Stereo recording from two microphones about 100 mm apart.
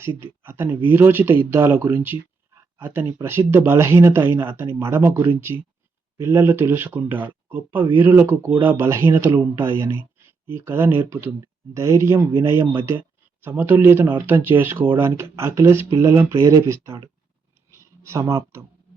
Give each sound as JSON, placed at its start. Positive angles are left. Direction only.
{"t": 0.4, "sound": "speech", "side_deg": -20}
{"t": 16.4, "sound": "speech", "side_deg": -35}
{"t": 17.7, "sound": "a sound", "side_deg": -30}